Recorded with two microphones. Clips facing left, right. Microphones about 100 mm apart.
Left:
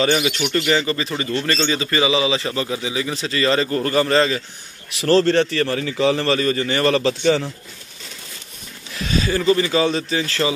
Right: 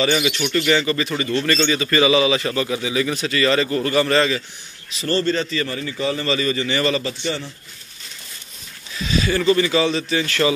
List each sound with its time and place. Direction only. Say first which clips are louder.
0.0 s a man's voice: left 1 dB; 40° left (ahead or behind)
5.0 s a man's voice: left 5 dB; 85° left
6.2 s a man's voice: left 2 dB; 45° left (ahead or behind)
7.0 s a man's voice: left 8 dB; 90° left
9.1 s speech: even; 35° left (ahead or behind)